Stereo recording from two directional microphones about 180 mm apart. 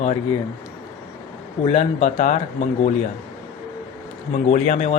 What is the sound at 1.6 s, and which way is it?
Speech, 35° left (ahead or behind).